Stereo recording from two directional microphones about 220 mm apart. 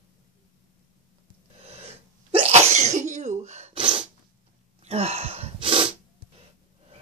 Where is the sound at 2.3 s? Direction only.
30° right (ahead or behind).